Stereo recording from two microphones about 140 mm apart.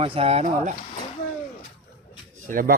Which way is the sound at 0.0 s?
45° right (ahead or behind).